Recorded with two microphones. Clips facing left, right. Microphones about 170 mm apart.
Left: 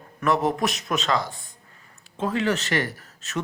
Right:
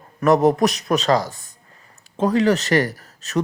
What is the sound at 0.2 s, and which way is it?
A man's voice, 40° right (ahead or behind).